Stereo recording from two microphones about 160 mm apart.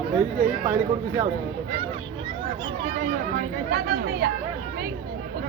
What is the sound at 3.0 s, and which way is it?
Chatter, 65° right (ahead or behind).